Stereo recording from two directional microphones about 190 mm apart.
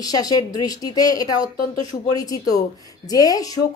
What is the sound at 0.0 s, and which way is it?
A woman's voice, 20° left (ahead or behind).